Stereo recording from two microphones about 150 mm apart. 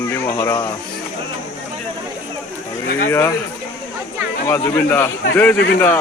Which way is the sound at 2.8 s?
70° left (ahead or behind).